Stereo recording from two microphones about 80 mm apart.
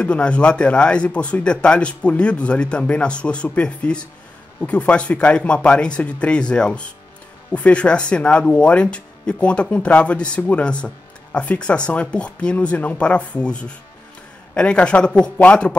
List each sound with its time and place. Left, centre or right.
0.0 s speech: centre